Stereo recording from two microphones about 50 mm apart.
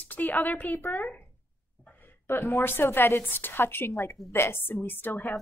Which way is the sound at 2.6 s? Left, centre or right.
Left.